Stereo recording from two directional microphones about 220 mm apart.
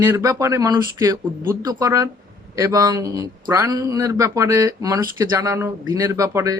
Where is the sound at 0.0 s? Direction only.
15° right (ahead or behind).